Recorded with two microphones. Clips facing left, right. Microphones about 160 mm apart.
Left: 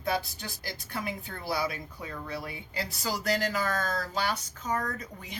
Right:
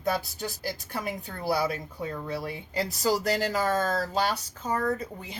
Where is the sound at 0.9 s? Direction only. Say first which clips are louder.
Right 2 dB; 40° right (ahead or behind).